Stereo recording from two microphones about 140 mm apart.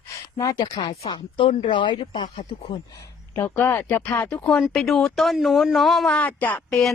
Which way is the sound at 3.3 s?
15° left (ahead or behind).